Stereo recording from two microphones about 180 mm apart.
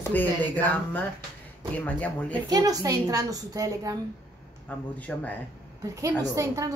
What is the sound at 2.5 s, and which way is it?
A woman's voice, 20° right (ahead or behind).